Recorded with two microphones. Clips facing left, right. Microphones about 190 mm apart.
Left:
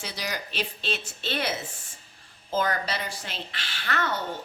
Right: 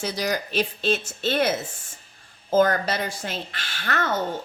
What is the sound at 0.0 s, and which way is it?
Speech, 45° right (ahead or behind).